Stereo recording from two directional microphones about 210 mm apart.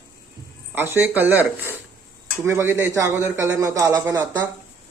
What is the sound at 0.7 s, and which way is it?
A man's voice, 10° right (ahead or behind).